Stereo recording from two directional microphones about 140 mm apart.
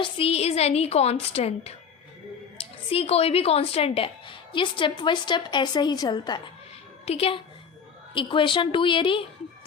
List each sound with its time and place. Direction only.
0.0 s a woman's voice: 45° left (ahead or behind)
2.9 s a woman's voice: 45° left (ahead or behind)
7.0 s a woman's voice: 45° left (ahead or behind)